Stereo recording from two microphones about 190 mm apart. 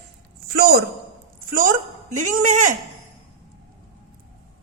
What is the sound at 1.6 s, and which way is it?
A woman's voice, 40° right (ahead or behind).